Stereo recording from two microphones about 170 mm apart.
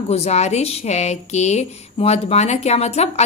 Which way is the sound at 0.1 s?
40° left (ahead or behind).